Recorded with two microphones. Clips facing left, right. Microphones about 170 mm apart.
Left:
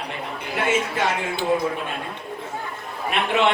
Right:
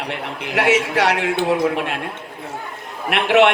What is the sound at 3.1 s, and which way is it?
Speech, 80° right.